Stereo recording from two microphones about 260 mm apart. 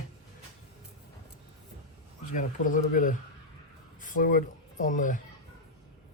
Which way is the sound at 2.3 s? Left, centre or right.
Left.